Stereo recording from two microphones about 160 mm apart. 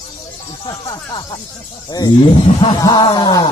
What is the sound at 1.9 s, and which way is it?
Speech, 25° left (ahead or behind).